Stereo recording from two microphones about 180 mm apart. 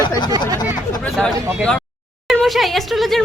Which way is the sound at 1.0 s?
5° left (ahead or behind).